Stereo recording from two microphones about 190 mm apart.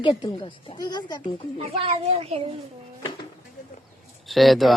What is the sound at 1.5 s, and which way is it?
Speech, 30° right (ahead or behind).